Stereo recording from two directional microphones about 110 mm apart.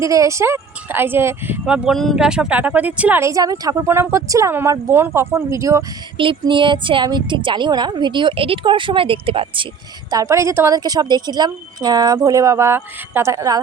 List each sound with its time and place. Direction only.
0.0 s speech: 30° right (ahead or behind)
1.6 s speech: 5° right (ahead or behind)
3.2 s speech: 30° right (ahead or behind)
6.1 s a woman's voice: 50° right (ahead or behind)
10.1 s speech: 30° right (ahead or behind)
10.8 s speech: 35° right (ahead or behind)